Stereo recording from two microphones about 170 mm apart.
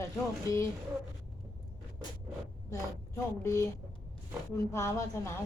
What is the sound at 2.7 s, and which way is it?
Speech, 15° left (ahead or behind).